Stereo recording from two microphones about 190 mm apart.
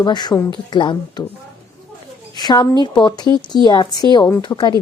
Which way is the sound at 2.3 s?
20° left (ahead or behind).